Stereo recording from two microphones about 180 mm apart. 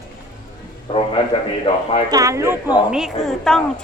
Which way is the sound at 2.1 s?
20° right (ahead or behind).